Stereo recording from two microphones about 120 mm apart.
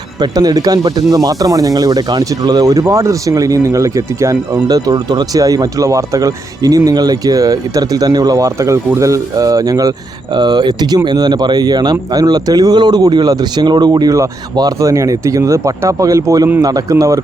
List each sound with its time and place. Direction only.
0.2 s speech: 30° right (ahead or behind)